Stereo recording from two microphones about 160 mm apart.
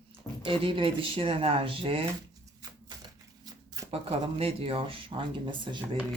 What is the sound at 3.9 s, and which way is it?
Speech, 40° right (ahead or behind).